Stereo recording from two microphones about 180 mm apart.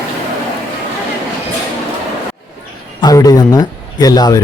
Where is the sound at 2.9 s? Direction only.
20° left (ahead or behind).